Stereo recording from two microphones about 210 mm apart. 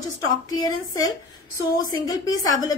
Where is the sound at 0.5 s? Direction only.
20° left (ahead or behind).